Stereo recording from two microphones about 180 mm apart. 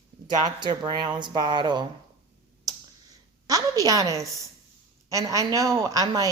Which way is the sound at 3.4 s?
20° right (ahead or behind).